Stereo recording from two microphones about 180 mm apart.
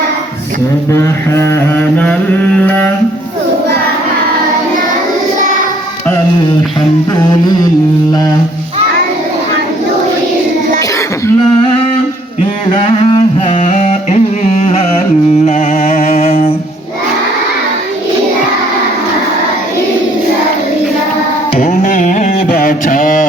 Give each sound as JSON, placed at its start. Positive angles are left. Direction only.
{"t": 0.9, "sound": "mantra", "side_deg": 15}
{"t": 2.6, "sound": "music", "side_deg": 5}
{"t": 7.3, "sound": "carnatic music", "side_deg": 20}
{"t": 12.7, "sound": "a sound", "side_deg": 30}
{"t": 13.6, "sound": "music", "side_deg": 40}
{"t": 14.6, "sound": "carnatic music", "side_deg": 35}
{"t": 15.4, "sound": "music", "side_deg": 40}
{"t": 21.7, "sound": "carnatic music", "side_deg": 45}
{"t": 22.3, "sound": "mantra", "side_deg": 55}